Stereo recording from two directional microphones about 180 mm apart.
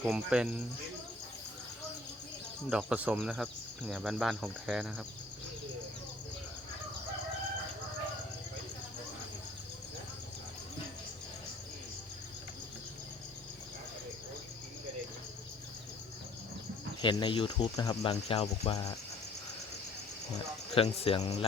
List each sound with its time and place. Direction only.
0.0 s speech: 5° right (ahead or behind)
2.6 s speech: 5° right (ahead or behind)
17.0 s speech: 25° left (ahead or behind)
18.1 s speech: 35° left (ahead or behind)
20.7 s speech: 30° left (ahead or behind)